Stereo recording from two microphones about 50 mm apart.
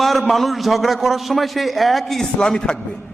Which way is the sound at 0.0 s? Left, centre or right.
Centre.